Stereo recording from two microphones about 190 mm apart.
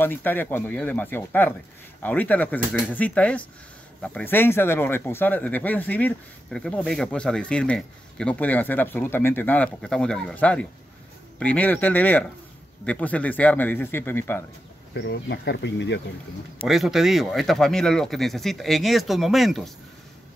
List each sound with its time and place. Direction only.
0.0 s speech: 10° left (ahead or behind)
15.0 s speech: 65° left (ahead or behind)
16.6 s speech: centre (ahead or behind)